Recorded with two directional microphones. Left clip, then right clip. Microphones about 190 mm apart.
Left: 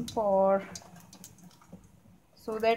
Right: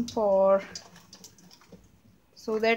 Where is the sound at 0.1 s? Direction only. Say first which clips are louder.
Right 3 dB; 25° right (ahead or behind).